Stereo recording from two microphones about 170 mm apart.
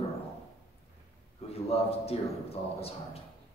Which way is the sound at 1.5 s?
35° left (ahead or behind).